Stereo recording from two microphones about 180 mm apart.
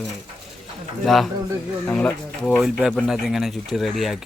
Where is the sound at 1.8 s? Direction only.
10° left (ahead or behind).